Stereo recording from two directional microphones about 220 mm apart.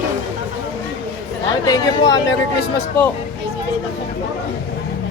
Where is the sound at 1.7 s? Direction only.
15° left (ahead or behind).